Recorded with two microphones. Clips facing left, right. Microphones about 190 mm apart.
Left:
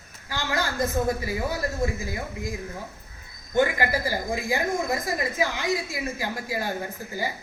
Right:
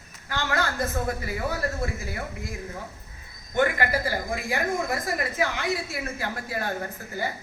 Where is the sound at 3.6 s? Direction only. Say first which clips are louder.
Even; 10° left (ahead or behind).